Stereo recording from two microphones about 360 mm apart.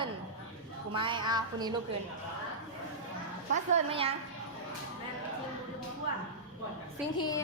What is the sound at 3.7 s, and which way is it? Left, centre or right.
Speech, centre.